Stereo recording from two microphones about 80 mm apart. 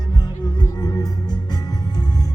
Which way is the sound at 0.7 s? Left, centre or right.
Left.